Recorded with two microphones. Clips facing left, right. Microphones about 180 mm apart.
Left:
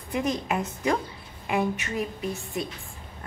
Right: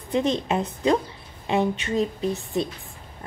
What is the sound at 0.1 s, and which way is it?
A woman's voice, 25° right (ahead or behind).